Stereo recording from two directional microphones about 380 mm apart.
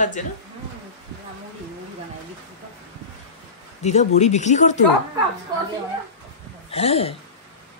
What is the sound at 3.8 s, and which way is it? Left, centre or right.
Speech, centre.